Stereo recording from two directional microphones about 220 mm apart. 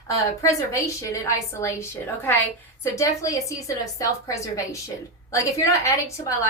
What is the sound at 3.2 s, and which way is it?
A woman's voice, 15° left (ahead or behind).